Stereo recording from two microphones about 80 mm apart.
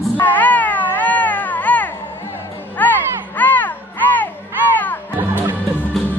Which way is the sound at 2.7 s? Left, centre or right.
Left.